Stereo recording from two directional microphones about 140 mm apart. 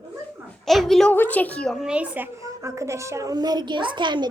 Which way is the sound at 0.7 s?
Centre (ahead or behind).